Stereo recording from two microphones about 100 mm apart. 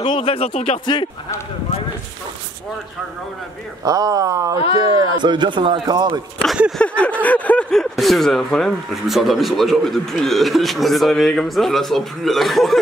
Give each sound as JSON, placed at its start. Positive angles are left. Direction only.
{"t": 0.0, "sound": "speech", "side_deg": 55}
{"t": 3.8, "sound": "a man's voice", "side_deg": -40}
{"t": 6.8, "sound": "a sound", "side_deg": 10}
{"t": 7.8, "sound": "speech", "side_deg": 0}